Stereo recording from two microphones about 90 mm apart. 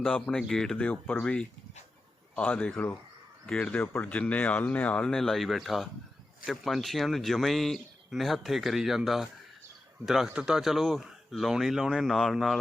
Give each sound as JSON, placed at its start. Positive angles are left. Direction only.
{"t": 0.0, "sound": "speech", "side_deg": 10}
{"t": 0.9, "sound": "speech", "side_deg": 15}